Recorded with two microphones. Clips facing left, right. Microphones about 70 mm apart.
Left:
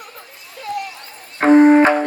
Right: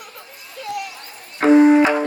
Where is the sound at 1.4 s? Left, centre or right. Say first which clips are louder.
Left 2 dB; left.